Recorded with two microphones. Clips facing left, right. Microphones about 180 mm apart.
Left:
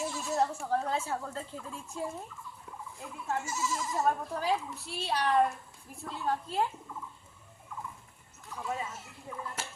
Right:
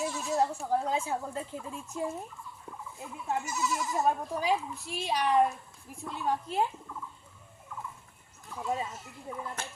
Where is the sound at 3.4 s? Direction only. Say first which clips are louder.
Right 2 dB; 25° left (ahead or behind).